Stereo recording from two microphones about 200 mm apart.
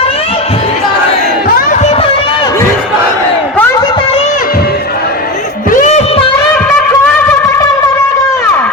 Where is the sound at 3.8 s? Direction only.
25° left (ahead or behind).